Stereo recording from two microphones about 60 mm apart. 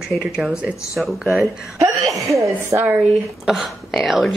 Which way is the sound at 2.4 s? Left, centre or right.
Right.